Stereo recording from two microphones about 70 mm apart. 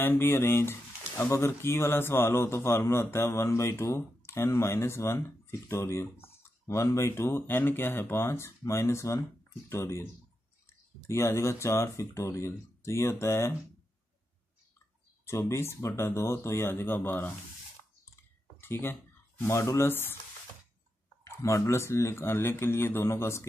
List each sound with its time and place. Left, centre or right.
0.0 s speech: left
15.2 s speech: left
18.6 s speech: left
21.4 s speech: left